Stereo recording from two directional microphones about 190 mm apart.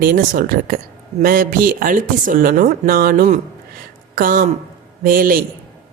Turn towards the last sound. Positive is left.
turn(degrees=-50)  # may be behind; listen again after turning